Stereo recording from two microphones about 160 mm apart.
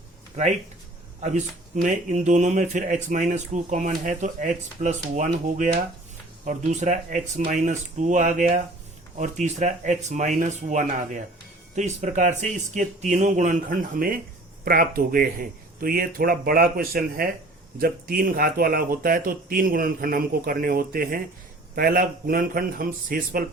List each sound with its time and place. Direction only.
0.4 s speech: 45° right (ahead or behind); by 23.4 s 60° right (ahead or behind)